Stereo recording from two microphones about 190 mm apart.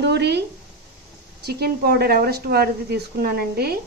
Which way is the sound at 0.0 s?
60° right (ahead or behind).